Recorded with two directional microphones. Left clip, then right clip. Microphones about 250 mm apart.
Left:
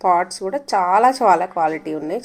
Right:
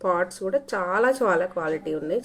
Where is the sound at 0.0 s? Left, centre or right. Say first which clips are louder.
Left 7 dB; left.